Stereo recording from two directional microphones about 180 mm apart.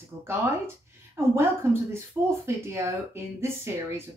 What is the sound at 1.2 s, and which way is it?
Speech, 15° right (ahead or behind).